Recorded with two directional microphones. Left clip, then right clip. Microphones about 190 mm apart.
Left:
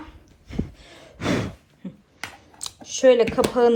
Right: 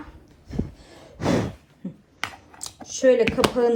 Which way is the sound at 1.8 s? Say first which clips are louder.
Right 2 dB; 15° right (ahead or behind).